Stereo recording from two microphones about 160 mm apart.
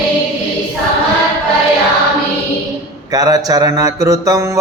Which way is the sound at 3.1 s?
25° right (ahead or behind).